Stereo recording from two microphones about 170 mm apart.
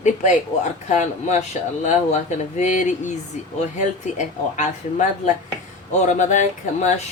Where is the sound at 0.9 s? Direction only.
40° left (ahead or behind).